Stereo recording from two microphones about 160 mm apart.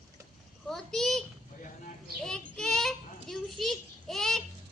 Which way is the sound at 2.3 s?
5° left (ahead or behind).